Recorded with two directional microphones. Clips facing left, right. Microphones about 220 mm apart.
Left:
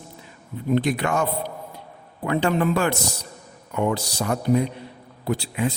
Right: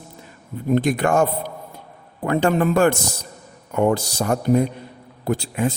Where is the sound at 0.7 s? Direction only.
45° right (ahead or behind).